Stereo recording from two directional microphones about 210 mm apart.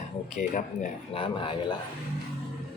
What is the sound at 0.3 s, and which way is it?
Speech, 35° left (ahead or behind).